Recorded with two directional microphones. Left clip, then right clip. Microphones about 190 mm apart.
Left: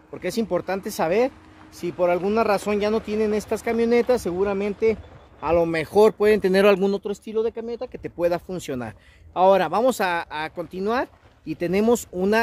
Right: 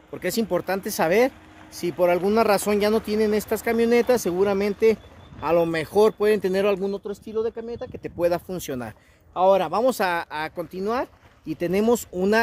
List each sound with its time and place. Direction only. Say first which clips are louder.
0.1 s speech: even; 5° right (ahead or behind); by 6.6 s 15° left (ahead or behind)
6.6 s speech: left 5 dB; 35° left (ahead or behind)
7.3 s speech: left 2 dB; 10° left (ahead or behind)
9.3 s speech: left 2 dB; 25° left (ahead or behind)
9.7 s speech: left 1 dB; 10° left (ahead or behind)
9.9 s speech: even; centre (ahead or behind)
10.8 s speech: left 2 dB; 15° left (ahead or behind)
11.4 s speech: left 1 dB; centre (ahead or behind)